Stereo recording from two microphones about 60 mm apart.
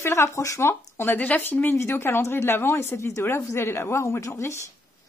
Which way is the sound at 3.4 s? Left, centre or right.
Left.